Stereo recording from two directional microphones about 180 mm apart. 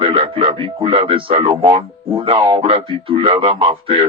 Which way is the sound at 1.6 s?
20° right (ahead or behind).